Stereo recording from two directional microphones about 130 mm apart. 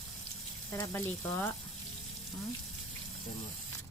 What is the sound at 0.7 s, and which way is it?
Speech, 25° left (ahead or behind).